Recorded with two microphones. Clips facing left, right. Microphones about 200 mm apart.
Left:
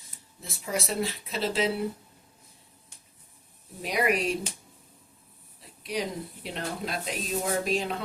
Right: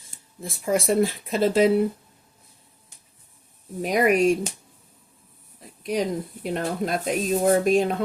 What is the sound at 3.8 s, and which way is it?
Speech, 45° right (ahead or behind).